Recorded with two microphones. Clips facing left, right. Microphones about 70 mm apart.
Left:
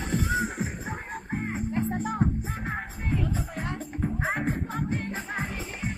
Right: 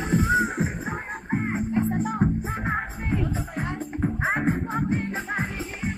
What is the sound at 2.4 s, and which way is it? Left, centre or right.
Music, right.